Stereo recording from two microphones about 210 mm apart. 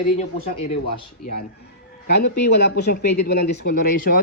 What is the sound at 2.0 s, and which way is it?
Speech, 50° left (ahead or behind).